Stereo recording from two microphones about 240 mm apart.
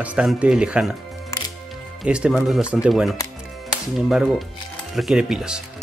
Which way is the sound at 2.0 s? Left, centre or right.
Centre.